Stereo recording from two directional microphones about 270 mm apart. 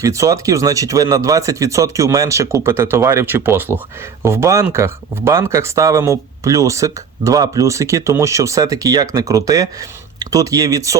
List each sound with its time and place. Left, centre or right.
0.0 s speech: centre